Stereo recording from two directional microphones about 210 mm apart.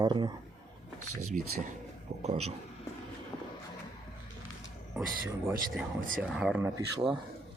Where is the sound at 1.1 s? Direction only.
90° right.